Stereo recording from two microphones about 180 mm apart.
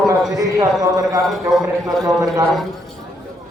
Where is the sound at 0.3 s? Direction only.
20° right (ahead or behind).